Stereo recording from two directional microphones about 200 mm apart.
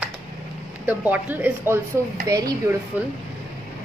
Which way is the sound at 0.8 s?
10° right (ahead or behind).